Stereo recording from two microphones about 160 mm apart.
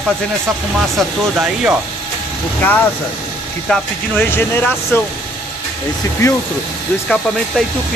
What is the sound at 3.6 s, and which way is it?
Speech, 10° left (ahead or behind).